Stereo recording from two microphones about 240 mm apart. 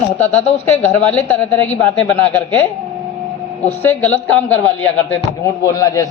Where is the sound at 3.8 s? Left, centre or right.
Centre.